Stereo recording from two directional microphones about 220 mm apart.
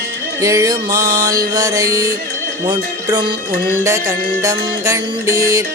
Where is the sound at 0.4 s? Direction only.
15° right (ahead or behind).